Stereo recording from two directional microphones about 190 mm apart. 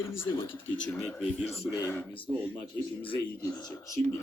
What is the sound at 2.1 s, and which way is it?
Speech, 25° left (ahead or behind).